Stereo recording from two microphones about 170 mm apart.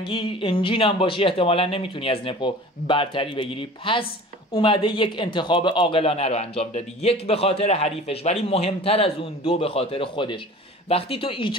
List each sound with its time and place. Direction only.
0.0 s speech: 30° left (ahead or behind)